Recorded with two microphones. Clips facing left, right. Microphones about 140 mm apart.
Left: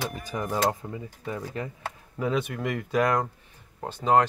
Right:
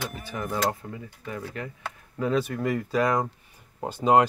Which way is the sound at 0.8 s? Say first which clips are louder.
Left 2 dB; 20° left (ahead or behind).